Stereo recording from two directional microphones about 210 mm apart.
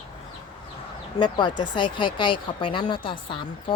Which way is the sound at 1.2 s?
20° left (ahead or behind).